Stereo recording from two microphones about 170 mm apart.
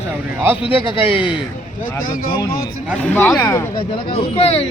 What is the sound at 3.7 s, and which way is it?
Speech, 35° left (ahead or behind).